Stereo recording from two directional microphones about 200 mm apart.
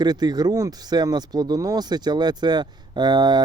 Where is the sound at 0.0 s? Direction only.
20° right (ahead or behind).